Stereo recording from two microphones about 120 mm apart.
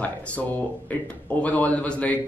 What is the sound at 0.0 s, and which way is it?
Speech, 15° left (ahead or behind).